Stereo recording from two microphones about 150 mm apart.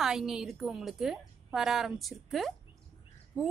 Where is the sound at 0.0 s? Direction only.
5° right (ahead or behind).